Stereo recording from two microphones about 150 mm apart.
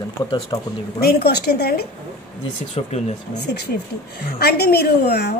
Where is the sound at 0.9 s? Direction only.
90° left.